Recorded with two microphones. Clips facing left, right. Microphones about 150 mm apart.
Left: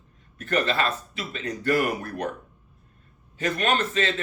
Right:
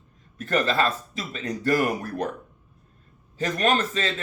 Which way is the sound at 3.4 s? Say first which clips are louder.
Right 1 dB; 40° right (ahead or behind).